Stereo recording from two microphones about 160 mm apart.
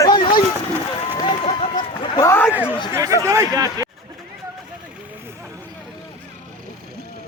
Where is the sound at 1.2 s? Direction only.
35° left (ahead or behind).